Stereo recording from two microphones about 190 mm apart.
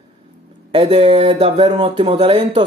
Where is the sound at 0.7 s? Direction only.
30° right (ahead or behind).